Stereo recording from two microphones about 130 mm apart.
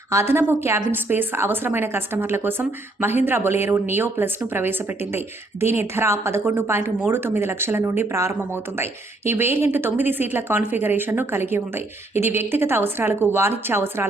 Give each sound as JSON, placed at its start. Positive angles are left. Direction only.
{"t": 0.1, "sound": "a woman's voice", "side_deg": -20}